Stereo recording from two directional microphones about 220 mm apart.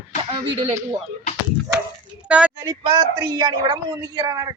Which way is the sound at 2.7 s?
25° right (ahead or behind).